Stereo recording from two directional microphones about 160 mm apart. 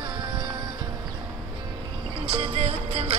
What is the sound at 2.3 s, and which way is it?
Music, 40° right (ahead or behind).